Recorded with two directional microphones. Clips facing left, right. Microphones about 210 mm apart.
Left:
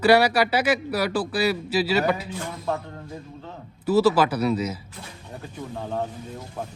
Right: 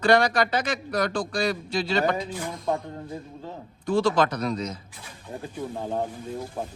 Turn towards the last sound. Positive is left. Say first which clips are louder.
# even
turn(degrees=-15)  # may be behind; listen again after turning